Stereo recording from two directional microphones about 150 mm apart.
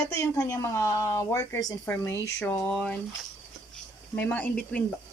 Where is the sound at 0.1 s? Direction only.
20° left (ahead or behind).